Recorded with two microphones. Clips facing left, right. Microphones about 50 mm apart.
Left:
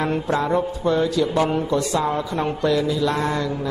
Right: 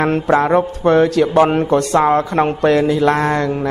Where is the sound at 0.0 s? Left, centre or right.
Right.